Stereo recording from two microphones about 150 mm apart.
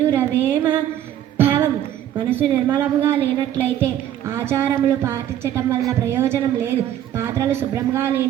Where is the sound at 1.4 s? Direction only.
15° right (ahead or behind).